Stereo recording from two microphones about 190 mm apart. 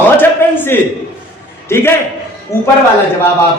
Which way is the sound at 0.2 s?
10° left (ahead or behind).